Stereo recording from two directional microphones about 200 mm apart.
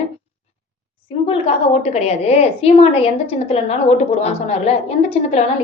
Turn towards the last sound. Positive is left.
turn(degrees=35)  # may be behind; listen again after turning